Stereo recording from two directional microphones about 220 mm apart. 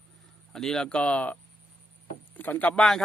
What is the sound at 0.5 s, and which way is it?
Speech, centre (ahead or behind).